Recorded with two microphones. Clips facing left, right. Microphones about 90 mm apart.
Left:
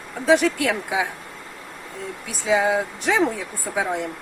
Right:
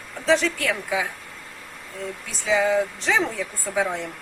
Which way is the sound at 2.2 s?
15° left (ahead or behind).